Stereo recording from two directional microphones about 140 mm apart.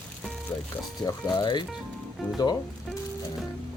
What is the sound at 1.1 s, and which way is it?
Speech, 30° left (ahead or behind).